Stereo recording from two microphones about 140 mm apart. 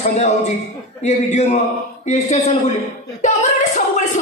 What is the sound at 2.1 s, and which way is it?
Speech, 60° left (ahead or behind).